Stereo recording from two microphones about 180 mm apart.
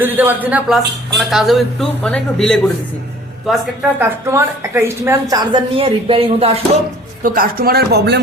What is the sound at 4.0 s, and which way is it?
A woman's voice, 15° right (ahead or behind).